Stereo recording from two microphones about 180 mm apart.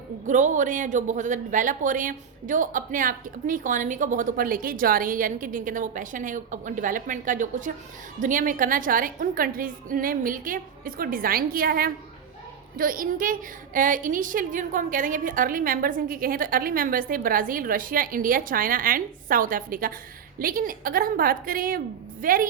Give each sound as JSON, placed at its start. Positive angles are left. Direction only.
{"t": 0.3, "sound": "speech", "side_deg": -45}